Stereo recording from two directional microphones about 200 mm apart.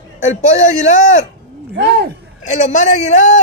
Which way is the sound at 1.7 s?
55° right (ahead or behind).